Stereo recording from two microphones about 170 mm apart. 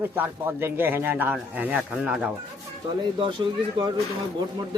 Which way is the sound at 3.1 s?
30° right (ahead or behind).